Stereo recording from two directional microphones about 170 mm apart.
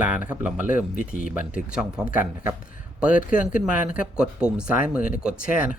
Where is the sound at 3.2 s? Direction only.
50° left (ahead or behind).